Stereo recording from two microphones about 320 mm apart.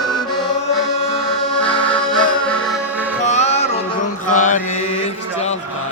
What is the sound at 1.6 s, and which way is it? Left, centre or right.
Accordion, centre.